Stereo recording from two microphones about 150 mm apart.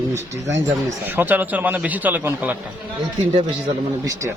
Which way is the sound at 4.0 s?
20° right (ahead or behind).